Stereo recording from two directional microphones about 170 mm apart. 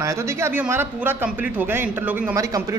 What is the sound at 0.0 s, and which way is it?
Speech, 15° right (ahead or behind).